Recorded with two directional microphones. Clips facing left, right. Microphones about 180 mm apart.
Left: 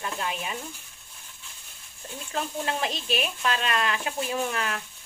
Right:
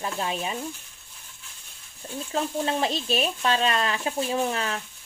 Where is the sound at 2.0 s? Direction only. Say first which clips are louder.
Right 4 dB; 30° right (ahead or behind).